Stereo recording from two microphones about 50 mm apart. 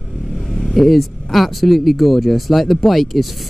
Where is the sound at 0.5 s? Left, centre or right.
Centre.